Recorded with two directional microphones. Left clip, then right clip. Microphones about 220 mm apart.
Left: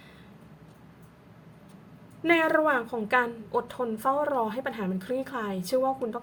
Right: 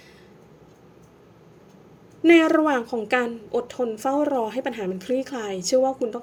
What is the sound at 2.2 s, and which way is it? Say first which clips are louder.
A woman's voice: right 6 dB; 25° right (ahead or behind).